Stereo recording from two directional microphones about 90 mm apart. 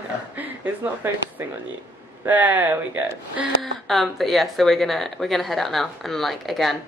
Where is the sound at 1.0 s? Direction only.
25° right (ahead or behind).